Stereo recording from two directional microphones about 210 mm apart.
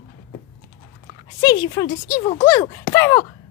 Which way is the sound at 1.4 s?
20° left (ahead or behind).